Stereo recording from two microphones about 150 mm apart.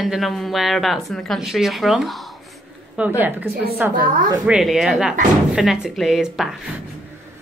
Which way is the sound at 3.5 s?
90° right.